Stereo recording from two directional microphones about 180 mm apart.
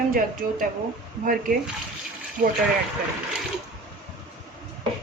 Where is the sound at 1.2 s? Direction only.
50° right (ahead or behind).